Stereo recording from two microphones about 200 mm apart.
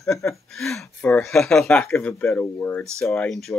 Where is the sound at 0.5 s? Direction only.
Centre (ahead or behind).